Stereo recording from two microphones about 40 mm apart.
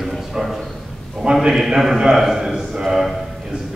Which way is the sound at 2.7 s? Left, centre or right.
Centre.